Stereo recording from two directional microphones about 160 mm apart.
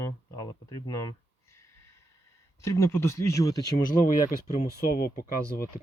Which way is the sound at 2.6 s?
15° left (ahead or behind).